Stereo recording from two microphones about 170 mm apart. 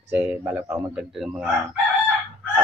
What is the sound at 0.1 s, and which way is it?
Speech, 10° right (ahead or behind).